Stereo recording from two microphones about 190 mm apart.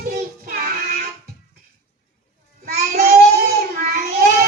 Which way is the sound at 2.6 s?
55° right (ahead or behind).